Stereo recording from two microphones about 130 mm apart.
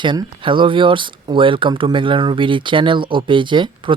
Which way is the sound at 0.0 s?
40° right (ahead or behind).